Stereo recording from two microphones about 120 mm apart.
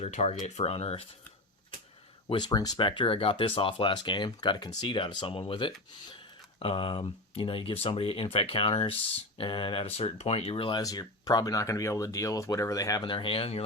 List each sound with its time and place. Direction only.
0.0 s speech: 70° left (ahead or behind); by 1.0 s 55° left (ahead or behind)
2.3 s speech: 35° left (ahead or behind); by 10.5 s 60° left (ahead or behind)
10.5 s speech: 45° left (ahead or behind)
10.8 s speech: 30° left (ahead or behind)
13.1 s speech: 50° left (ahead or behind)